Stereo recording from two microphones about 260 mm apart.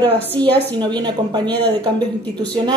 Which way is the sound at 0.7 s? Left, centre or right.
Centre.